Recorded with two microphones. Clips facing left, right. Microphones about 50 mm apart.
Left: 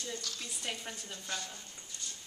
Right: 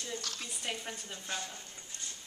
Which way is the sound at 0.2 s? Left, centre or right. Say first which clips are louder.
Right 1 dB; right.